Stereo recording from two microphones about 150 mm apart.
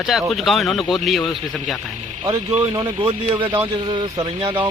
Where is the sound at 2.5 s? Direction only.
35° right (ahead or behind).